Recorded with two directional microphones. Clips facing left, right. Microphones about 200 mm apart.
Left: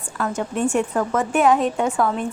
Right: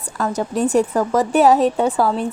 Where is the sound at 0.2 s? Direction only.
35° right (ahead or behind).